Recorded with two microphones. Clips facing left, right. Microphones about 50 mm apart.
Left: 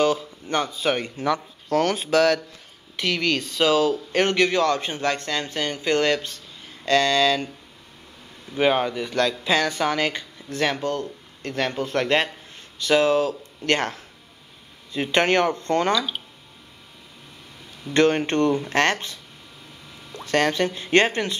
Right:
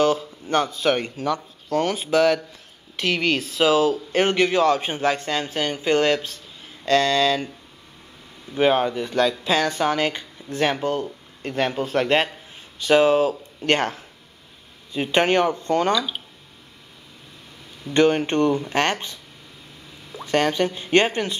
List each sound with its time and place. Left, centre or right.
0.0 s a sound: centre
0.7 s speech: centre
8.5 s speech: centre
15.8 s speech: centre
17.9 s speech: centre